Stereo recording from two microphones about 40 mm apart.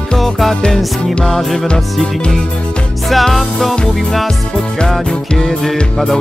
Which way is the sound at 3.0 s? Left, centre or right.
Centre.